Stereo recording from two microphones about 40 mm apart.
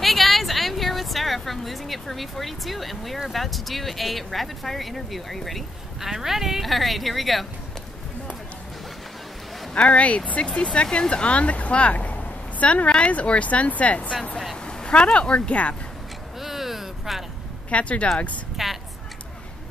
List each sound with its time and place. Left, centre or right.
0.0 s speech: centre
5.9 s speech: centre
9.8 s speech: left
14.7 s a sound: left
15.1 s speech: left
16.3 s a sound: centre
17.6 s speech: left
18.6 s a woman's voice: centre